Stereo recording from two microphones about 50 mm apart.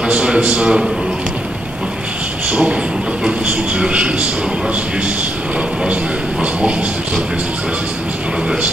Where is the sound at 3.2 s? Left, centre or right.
Right.